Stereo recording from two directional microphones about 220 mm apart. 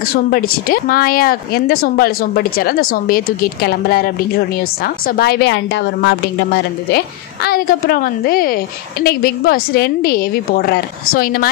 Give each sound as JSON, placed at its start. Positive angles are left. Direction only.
{"t": 0.1, "sound": "a woman's voice", "side_deg": 40}